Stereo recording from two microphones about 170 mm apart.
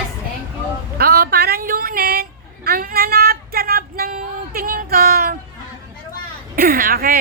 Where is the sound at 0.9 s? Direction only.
65° right (ahead or behind).